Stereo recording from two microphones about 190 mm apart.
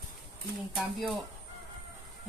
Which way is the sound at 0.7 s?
Centre (ahead or behind).